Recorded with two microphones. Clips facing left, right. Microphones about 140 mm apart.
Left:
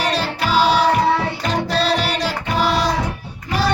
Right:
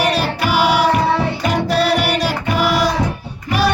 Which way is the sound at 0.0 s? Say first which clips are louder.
Right 3 dB; 10° right (ahead or behind).